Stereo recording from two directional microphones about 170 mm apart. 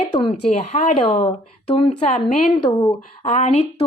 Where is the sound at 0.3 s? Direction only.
40° left (ahead or behind).